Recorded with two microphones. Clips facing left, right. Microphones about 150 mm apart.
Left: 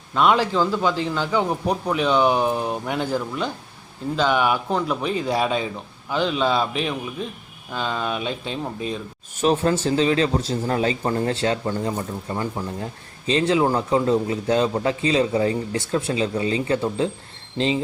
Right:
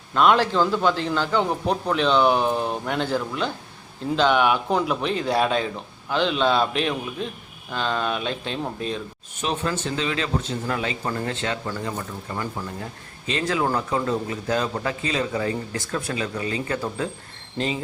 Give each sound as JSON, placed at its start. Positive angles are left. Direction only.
{"t": 0.1, "sound": "a man's voice", "side_deg": 5}
{"t": 9.4, "sound": "a man's voice", "side_deg": 40}